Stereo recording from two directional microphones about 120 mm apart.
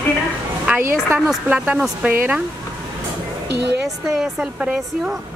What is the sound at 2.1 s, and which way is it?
Speech, 15° right (ahead or behind).